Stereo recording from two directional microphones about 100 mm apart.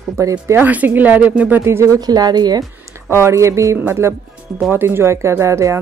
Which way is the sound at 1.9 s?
40° right (ahead or behind).